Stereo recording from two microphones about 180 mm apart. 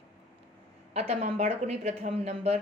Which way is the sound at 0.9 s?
35° right (ahead or behind).